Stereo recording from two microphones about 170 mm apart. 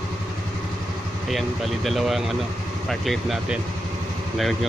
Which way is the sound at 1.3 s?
Centre (ahead or behind).